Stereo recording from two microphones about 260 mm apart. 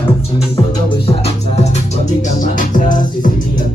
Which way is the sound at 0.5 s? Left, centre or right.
Centre.